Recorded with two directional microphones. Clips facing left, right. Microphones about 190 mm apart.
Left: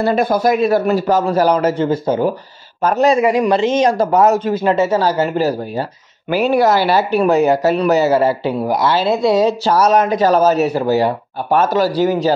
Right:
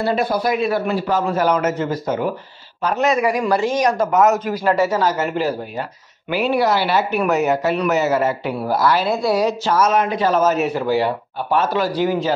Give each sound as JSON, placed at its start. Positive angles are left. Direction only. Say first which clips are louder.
{"t": 0.0, "sound": "a man's voice", "louder": "left 4 dB", "side_deg": 45}
{"t": 8.5, "sound": "a man's voice", "louder": "left 2 dB", "side_deg": 20}
{"t": 9.7, "sound": "a man's voice", "louder": "left 3 dB", "side_deg": 35}